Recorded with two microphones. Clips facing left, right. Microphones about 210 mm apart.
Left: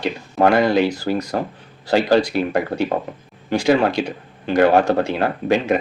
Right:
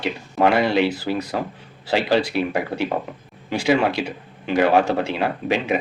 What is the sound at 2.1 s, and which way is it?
A man's voice, 5° right (ahead or behind).